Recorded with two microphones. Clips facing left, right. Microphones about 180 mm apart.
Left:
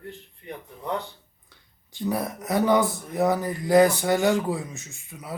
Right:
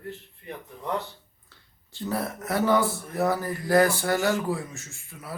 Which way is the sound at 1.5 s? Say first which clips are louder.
Even; 15° left (ahead or behind).